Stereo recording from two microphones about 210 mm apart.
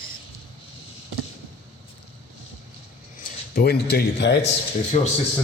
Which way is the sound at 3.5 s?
50° left (ahead or behind).